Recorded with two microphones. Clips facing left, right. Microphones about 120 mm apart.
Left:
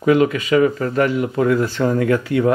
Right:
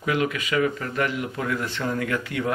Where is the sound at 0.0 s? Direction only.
35° left (ahead or behind).